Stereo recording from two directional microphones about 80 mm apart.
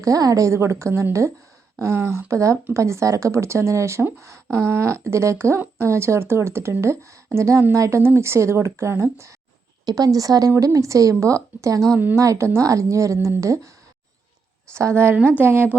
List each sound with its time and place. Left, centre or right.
0.0 s speech: right
9.8 s a woman's voice: right
14.7 s a woman's voice: right